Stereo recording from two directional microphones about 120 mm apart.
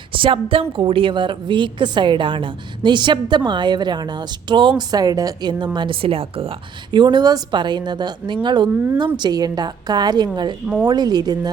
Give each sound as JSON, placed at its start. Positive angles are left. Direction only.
{"t": 0.1, "sound": "a woman's voice", "side_deg": -45}
{"t": 6.9, "sound": "a woman's voice", "side_deg": -40}